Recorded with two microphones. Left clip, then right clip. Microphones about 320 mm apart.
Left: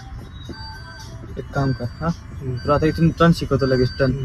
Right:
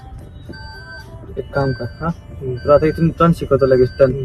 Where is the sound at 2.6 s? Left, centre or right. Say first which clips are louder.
Right 6 dB; right.